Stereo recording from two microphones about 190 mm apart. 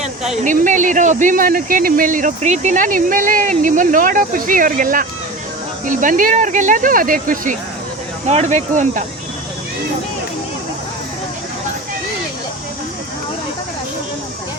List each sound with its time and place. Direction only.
0.4 s speech: 45° right (ahead or behind)